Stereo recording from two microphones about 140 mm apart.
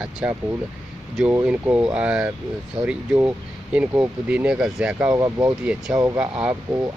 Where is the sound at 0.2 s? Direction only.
10° right (ahead or behind).